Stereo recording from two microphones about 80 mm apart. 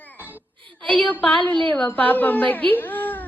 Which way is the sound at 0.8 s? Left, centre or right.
Centre.